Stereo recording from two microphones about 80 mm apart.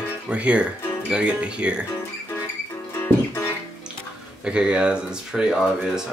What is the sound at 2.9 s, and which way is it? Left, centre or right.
Music, left.